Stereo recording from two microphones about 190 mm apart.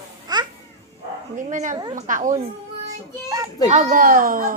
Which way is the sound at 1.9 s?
40° right (ahead or behind).